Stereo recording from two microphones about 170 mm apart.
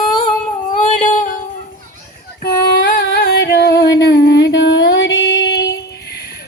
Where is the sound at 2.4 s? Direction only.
65° left (ahead or behind).